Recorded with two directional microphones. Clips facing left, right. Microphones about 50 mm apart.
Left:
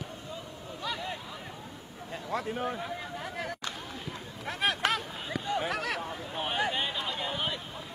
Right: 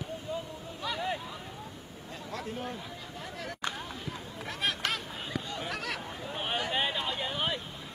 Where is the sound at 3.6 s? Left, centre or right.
Right.